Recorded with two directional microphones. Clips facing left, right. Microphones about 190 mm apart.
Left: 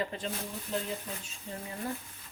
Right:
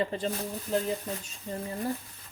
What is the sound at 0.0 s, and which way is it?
Speech, 30° right (ahead or behind).